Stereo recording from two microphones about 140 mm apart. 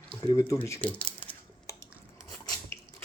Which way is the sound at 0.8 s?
10° left (ahead or behind).